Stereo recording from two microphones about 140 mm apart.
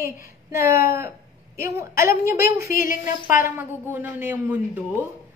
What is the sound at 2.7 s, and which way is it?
Speech, 75° left (ahead or behind).